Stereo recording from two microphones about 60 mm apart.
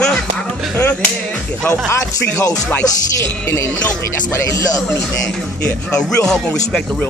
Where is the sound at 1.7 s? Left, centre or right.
Left.